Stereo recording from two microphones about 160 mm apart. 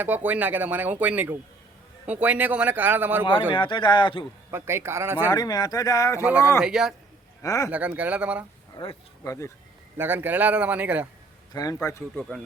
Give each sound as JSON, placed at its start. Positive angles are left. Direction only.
{"t": 0.0, "sound": "speech", "side_deg": -10}
{"t": 3.5, "sound": "speech", "side_deg": 30}
{"t": 4.5, "sound": "speech", "side_deg": -15}
{"t": 5.3, "sound": "speech", "side_deg": 25}
{"t": 6.6, "sound": "speech", "side_deg": -5}
{"t": 7.4, "sound": "speech", "side_deg": 20}
{"t": 7.7, "sound": "speech", "side_deg": -10}
{"t": 8.7, "sound": "a sound", "side_deg": 30}
{"t": 9.2, "sound": "speech", "side_deg": 20}
{"t": 10.0, "sound": "speech", "side_deg": -15}
{"t": 11.5, "sound": "speech", "side_deg": 20}